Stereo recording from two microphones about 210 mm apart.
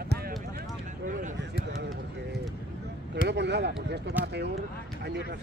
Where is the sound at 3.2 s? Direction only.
55° right (ahead or behind).